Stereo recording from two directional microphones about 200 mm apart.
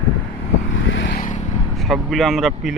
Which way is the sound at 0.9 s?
60° left (ahead or behind).